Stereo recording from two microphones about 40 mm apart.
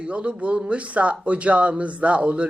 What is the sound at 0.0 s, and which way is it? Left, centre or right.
Speech, right.